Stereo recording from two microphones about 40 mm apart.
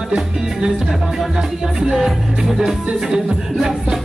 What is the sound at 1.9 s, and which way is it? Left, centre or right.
Music, centre.